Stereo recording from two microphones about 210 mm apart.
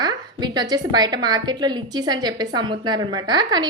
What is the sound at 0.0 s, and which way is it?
A woman's voice, 20° right (ahead or behind).